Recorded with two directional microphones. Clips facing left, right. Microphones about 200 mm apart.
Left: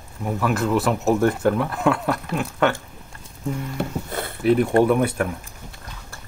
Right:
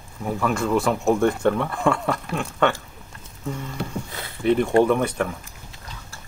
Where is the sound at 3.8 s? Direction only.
55° left (ahead or behind).